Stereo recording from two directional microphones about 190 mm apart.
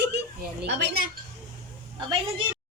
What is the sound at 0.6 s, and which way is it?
Speech, 55° right (ahead or behind).